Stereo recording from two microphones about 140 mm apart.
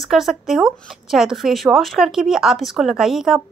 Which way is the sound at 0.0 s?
Centre (ahead or behind).